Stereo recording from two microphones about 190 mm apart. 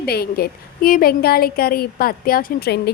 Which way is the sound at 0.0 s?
55° left (ahead or behind).